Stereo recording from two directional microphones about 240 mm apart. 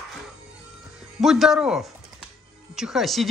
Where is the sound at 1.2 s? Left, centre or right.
Centre.